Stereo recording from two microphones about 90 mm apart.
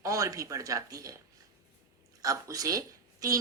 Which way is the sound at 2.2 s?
40° right (ahead or behind).